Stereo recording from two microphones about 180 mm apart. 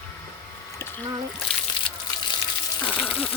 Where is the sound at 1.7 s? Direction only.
25° left (ahead or behind).